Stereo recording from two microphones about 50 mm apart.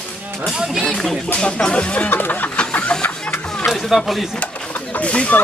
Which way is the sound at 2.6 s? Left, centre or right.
Centre.